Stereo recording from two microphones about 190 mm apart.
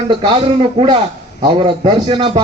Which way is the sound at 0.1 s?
25° right (ahead or behind).